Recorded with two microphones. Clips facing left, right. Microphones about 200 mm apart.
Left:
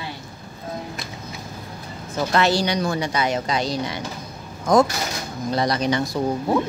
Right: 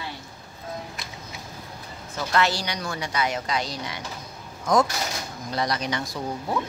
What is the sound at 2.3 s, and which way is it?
Speech, 25° left (ahead or behind).